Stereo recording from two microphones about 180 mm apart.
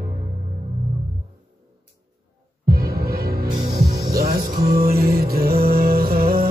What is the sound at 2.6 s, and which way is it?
Music, 55° right (ahead or behind).